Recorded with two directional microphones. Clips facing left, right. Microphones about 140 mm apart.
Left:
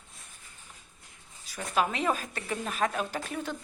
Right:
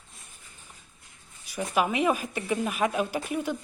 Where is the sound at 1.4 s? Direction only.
10° right (ahead or behind).